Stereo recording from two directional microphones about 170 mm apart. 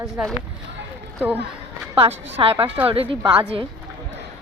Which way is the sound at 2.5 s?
10° right (ahead or behind).